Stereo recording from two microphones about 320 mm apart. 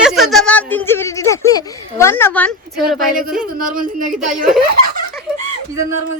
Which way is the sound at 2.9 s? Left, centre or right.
Right.